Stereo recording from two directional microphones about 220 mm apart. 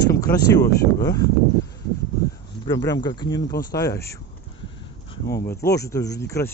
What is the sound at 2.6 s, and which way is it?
Speech, 15° left (ahead or behind).